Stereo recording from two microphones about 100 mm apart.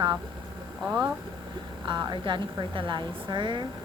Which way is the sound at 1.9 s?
50° right (ahead or behind).